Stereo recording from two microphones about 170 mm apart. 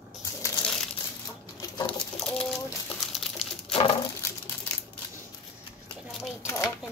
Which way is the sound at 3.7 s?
30° left (ahead or behind).